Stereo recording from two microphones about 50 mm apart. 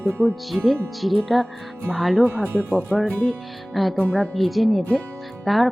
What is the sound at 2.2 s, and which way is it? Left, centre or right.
Speech, right.